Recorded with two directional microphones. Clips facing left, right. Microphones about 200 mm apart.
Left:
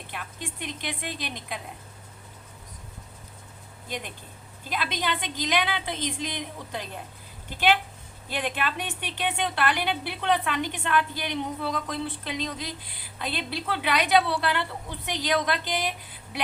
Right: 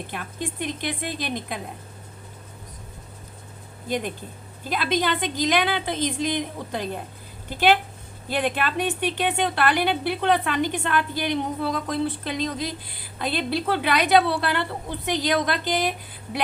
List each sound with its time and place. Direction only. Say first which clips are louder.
0.1 s a woman's voice: right 6 dB; 40° right (ahead or behind)
3.8 s a woman's voice: right 9 dB; 40° right (ahead or behind)
8.3 s a woman's voice: right 5 dB; 40° right (ahead or behind)